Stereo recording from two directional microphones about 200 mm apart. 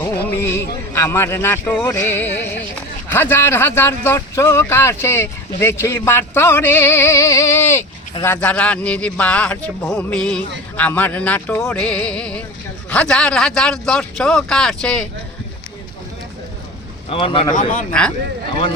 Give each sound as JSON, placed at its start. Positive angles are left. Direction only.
{"t": 0.3, "sound": "a man's voice", "side_deg": 10}
{"t": 17.1, "sound": "speech", "side_deg": 25}
{"t": 17.5, "sound": "speech", "side_deg": 40}